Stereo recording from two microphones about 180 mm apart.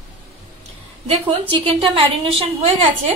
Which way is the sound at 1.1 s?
35° right (ahead or behind).